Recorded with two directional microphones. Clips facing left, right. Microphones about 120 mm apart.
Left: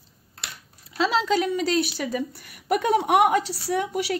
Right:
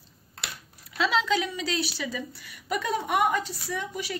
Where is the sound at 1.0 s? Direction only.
40° left (ahead or behind); by 4.1 s 70° left (ahead or behind).